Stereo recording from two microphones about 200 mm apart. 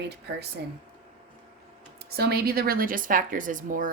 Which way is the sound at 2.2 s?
50° right (ahead or behind).